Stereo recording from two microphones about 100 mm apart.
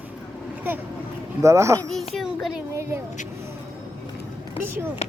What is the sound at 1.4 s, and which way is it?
Speech, 30° right (ahead or behind).